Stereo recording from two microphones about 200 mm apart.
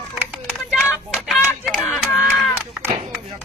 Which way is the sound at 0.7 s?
Centre (ahead or behind).